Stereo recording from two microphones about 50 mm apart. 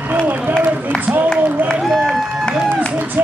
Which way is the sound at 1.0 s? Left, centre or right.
Right.